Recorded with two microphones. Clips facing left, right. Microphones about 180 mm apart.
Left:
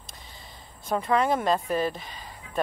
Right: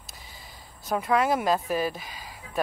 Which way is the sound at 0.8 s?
5° right (ahead or behind).